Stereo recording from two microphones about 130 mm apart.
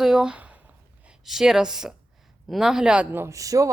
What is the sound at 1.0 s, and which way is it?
A man's voice, 5° right (ahead or behind).